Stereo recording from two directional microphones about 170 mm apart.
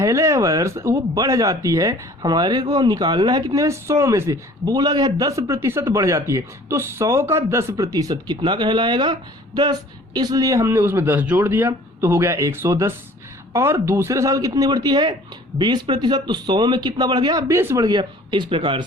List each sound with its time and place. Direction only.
0.0 s speech: 15° right (ahead or behind)
10.2 s speech: 25° right (ahead or behind)